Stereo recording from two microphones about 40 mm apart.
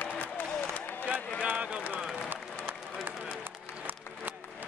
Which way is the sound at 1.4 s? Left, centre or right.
Right.